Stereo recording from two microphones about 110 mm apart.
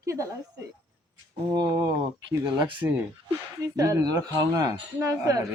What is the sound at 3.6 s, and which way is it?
Speech, 30° right (ahead or behind).